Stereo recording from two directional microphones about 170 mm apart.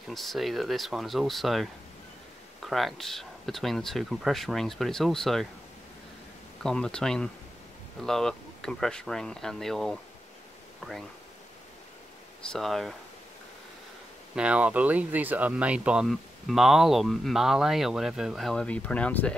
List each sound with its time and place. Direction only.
0.1 s speech: centre (ahead or behind)
6.6 s speech: 5° left (ahead or behind)
12.5 s speech: centre (ahead or behind)
14.3 s speech: 5° right (ahead or behind)